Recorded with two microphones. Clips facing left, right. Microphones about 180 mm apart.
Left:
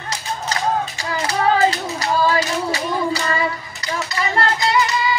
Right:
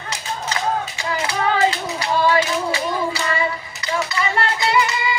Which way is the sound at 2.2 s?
40° left (ahead or behind).